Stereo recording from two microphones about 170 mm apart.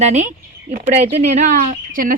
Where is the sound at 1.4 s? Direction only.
55° right (ahead or behind).